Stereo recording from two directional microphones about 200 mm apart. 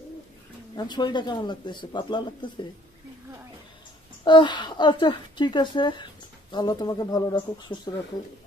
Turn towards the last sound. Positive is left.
turn(degrees=20)  # may be behind; listen again after turning